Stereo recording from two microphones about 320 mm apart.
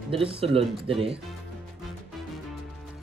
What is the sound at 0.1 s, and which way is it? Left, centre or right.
Speech, centre.